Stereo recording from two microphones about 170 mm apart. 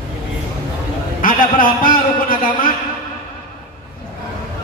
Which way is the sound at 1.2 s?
55° left (ahead or behind).